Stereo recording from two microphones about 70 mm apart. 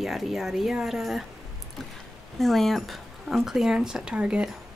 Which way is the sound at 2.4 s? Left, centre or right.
Centre.